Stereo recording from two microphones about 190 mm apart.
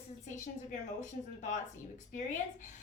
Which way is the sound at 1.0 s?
40° left (ahead or behind).